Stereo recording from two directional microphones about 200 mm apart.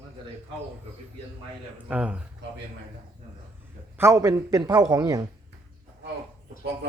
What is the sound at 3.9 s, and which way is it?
A man's voice, 15° right (ahead or behind).